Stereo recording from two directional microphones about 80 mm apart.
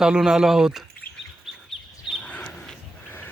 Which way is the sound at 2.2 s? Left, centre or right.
Centre.